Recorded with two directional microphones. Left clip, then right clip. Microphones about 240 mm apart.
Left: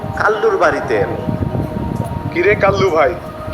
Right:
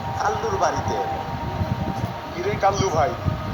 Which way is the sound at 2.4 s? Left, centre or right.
Centre.